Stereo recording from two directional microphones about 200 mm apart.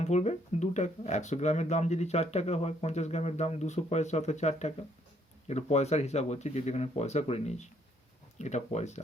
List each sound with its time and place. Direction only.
0.0 s speech: 35° left (ahead or behind)